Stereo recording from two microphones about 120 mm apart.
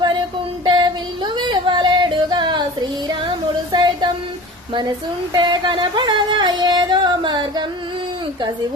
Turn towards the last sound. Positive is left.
turn(degrees=-40)  # may be behind; listen again after turning